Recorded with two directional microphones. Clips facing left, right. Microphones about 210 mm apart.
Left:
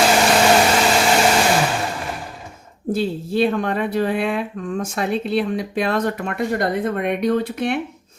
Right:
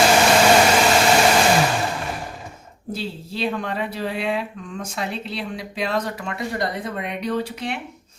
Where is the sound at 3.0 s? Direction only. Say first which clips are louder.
Left 8 dB; 50° left (ahead or behind).